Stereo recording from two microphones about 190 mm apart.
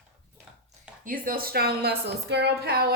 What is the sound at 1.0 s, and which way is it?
A woman's voice, 50° right (ahead or behind).